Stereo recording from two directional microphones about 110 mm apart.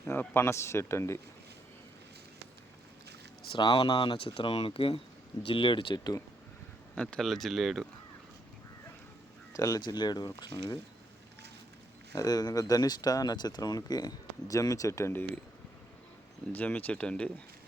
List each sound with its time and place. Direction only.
0.0 s speech: 20° left (ahead or behind)
3.5 s speech: 45° left (ahead or behind)
6.9 s speech: 10° left (ahead or behind)
9.5 s speech: 30° left (ahead or behind)
12.1 s speech: 35° left (ahead or behind)
16.5 s speech: 15° left (ahead or behind)